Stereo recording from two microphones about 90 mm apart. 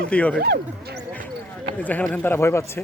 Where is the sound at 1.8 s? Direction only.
20° left (ahead or behind).